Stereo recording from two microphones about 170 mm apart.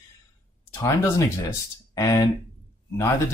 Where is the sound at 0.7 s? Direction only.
20° left (ahead or behind).